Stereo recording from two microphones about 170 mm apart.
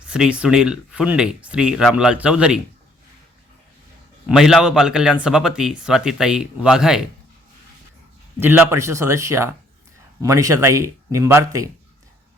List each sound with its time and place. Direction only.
0.1 s speech: 5° right (ahead or behind)
4.3 s speech: centre (ahead or behind)
8.4 s speech: 15° right (ahead or behind)